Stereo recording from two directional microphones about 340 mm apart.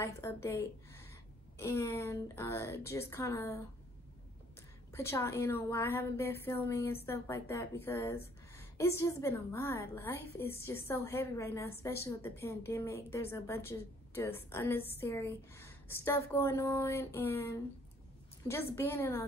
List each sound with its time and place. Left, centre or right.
0.0 s a woman's voice: centre
4.9 s a woman's voice: centre
18.8 s a woman's voice: centre